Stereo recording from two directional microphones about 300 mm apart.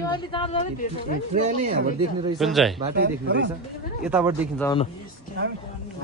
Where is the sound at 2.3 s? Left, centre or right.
Centre.